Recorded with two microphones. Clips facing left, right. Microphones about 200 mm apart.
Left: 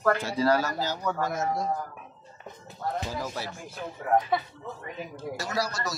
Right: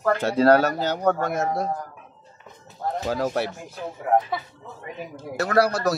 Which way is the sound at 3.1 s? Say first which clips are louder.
Right 10 dB; 65° right (ahead or behind).